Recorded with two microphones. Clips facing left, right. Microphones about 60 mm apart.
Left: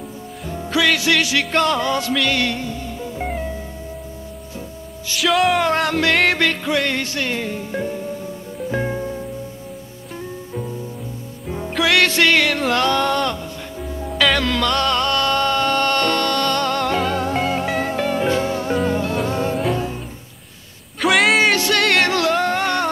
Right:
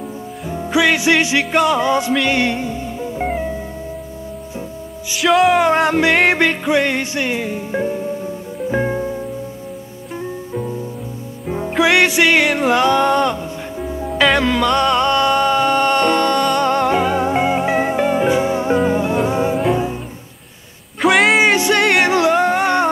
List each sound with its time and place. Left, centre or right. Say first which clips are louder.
0.5 s music: right 3 dB; centre
5.1 s music: right 4 dB; centre
5.6 s music: right 4 dB; centre
21.0 s a sound: right 3 dB; centre
21.5 s music: right 3 dB; centre